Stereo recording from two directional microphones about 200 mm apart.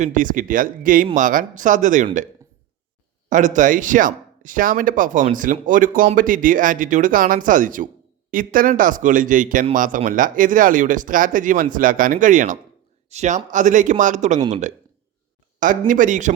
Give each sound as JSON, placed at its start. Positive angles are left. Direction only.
{"t": 0.0, "sound": "speech", "side_deg": -40}
{"t": 3.2, "sound": "speech", "side_deg": -40}
{"t": 15.9, "sound": "speech", "side_deg": -40}